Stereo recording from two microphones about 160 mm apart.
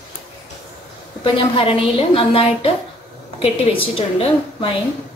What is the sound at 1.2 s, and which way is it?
A woman's voice, 35° left (ahead or behind).